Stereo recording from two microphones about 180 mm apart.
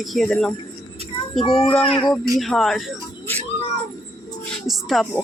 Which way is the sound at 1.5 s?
5° left (ahead or behind).